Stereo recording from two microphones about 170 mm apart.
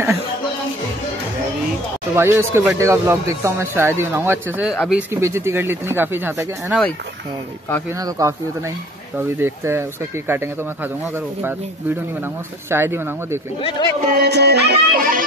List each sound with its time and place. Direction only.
2.1 s speech: 15° right (ahead or behind)
5.1 s speech: 15° right (ahead or behind)
8.0 s speech: 20° right (ahead or behind)
9.4 s speech: 15° right (ahead or behind)
12.6 s speech: 15° right (ahead or behind)
13.6 s speech: 30° left (ahead or behind)
14.1 s music: 75° right (ahead or behind); by 15.2 s 55° right (ahead or behind)